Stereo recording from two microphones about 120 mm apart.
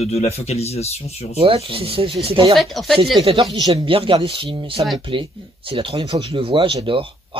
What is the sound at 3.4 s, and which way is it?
Speech, 30° right (ahead or behind).